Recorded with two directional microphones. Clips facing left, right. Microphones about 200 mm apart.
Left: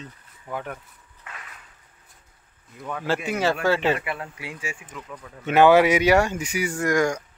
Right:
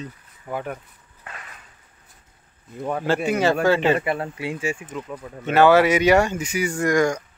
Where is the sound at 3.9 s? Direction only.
35° right (ahead or behind).